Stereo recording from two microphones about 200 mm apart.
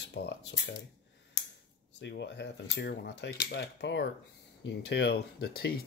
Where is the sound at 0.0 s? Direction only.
60° left (ahead or behind).